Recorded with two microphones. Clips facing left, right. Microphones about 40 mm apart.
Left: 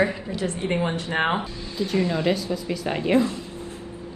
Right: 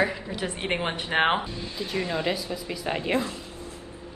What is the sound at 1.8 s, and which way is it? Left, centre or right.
A woman's voice, centre.